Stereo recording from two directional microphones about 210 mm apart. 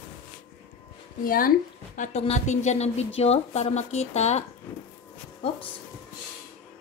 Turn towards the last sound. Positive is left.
turn(degrees=25)  # may be behind; listen again after turning